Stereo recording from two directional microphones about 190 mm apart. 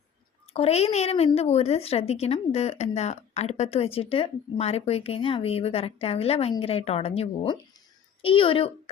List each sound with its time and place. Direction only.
0.5 s a woman's voice: 35° left (ahead or behind)